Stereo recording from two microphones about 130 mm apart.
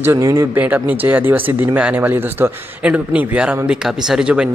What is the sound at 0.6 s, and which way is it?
Speech, 10° right (ahead or behind).